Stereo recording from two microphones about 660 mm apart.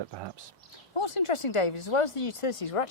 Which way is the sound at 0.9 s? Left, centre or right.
Left.